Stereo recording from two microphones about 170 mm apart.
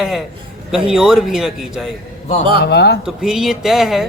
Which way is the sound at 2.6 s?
75° left (ahead or behind).